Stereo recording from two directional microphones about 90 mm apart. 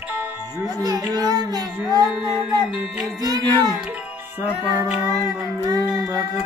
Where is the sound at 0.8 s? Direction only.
45° right (ahead or behind).